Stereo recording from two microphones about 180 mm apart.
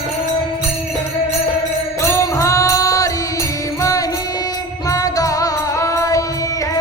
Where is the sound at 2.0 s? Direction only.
15° left (ahead or behind).